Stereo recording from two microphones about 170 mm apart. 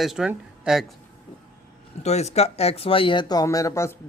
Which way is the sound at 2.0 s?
40° left (ahead or behind).